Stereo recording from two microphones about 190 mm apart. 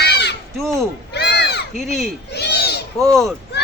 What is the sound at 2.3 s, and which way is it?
Owl, 60° left (ahead or behind).